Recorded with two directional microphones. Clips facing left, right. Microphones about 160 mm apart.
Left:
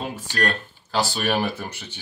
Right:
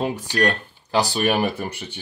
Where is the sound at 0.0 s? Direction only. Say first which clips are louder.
Right 5 dB; 15° right (ahead or behind).